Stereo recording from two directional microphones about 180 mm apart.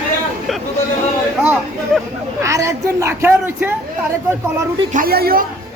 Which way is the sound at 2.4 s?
15° right (ahead or behind).